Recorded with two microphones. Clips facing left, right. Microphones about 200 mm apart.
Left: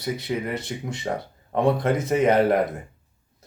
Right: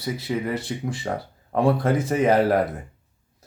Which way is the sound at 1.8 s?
30° right (ahead or behind).